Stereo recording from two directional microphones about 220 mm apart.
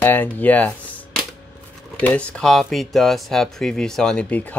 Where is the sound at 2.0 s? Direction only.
5° left (ahead or behind).